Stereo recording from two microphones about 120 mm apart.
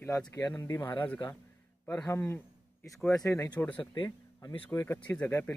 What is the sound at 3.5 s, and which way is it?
Speech, 10° left (ahead or behind).